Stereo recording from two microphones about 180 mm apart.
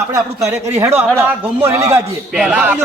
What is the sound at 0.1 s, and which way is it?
A man's voice, 15° right (ahead or behind).